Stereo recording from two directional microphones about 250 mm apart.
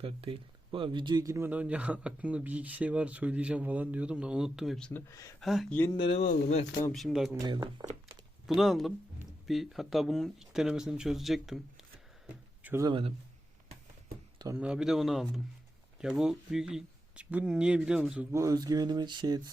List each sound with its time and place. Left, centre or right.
0.0 s speech: right; by 5.3 s centre
5.4 s speech: centre
6.9 s speech: centre
7.3 s speech: centre
8.4 s speech: centre
12.3 s a sound: centre
14.3 s speech: centre